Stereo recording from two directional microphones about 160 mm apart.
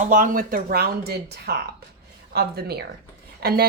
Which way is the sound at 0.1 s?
60° right (ahead or behind).